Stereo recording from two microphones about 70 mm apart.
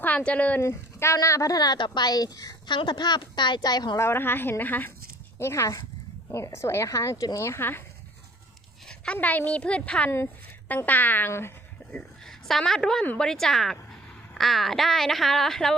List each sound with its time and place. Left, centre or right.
0.0 s speech: left
0.6 s a woman's voice: left
3.9 s a woman's voice: left
5.4 s speech: left
7.6 s a woman's voice: left
9.2 s speech: left
11.3 s a woman's voice: left
12.2 s a woman's voice: centre